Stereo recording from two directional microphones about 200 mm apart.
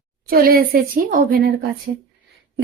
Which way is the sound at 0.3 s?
50° right (ahead or behind).